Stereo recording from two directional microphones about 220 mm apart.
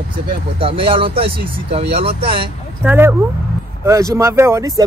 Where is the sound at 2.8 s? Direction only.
10° right (ahead or behind).